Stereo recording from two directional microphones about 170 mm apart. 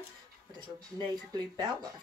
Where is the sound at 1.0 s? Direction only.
25° right (ahead or behind).